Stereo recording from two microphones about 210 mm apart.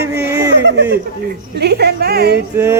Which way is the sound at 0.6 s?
55° right (ahead or behind).